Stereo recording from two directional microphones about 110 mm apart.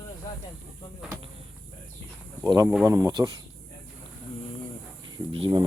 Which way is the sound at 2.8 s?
30° right (ahead or behind).